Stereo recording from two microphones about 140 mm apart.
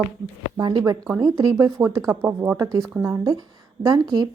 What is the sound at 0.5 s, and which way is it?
Speech, 30° right (ahead or behind).